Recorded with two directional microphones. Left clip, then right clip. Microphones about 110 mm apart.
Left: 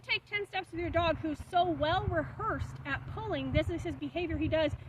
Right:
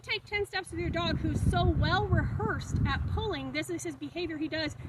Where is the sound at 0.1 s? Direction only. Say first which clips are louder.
Right 1 dB; 30° left (ahead or behind).